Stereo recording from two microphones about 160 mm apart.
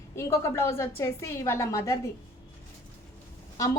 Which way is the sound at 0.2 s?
15° left (ahead or behind).